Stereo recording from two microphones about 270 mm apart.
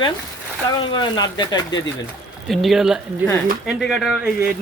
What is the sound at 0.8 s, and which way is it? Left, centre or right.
Speech, centre.